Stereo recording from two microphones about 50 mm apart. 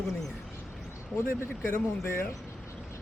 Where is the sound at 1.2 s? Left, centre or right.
Left.